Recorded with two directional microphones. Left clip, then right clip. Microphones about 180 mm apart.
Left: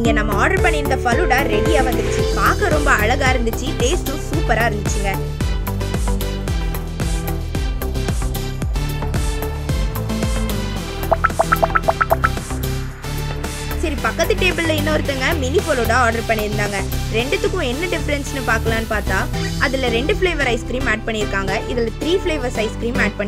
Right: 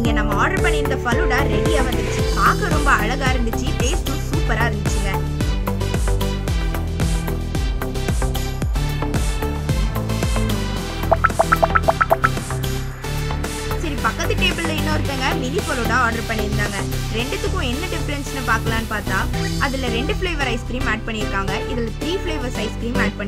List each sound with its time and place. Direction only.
0.1 s speech: 30° left (ahead or behind)
4.5 s speech: 35° left (ahead or behind)
11.1 s music: centre (ahead or behind)
14.0 s speech: 30° left (ahead or behind)